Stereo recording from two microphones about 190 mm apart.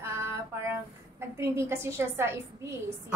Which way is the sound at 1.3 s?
15° right (ahead or behind).